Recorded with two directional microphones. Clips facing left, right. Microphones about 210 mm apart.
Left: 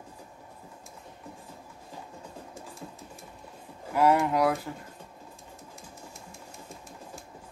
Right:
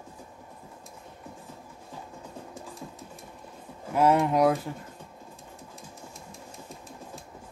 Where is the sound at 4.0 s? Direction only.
20° right (ahead or behind).